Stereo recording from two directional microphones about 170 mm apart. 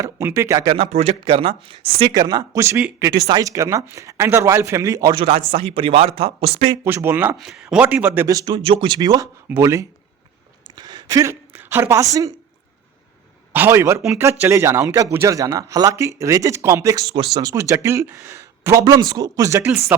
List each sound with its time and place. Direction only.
0.0 s speech: 15° right (ahead or behind)
0.7 s speech: 30° right (ahead or behind)
5.5 s speech: 35° right (ahead or behind)
6.8 s a woman's voice: 15° right (ahead or behind)
13.5 s speech: 15° right (ahead or behind)